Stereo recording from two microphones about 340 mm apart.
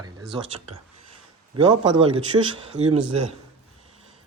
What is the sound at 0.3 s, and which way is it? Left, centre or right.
Speech, centre.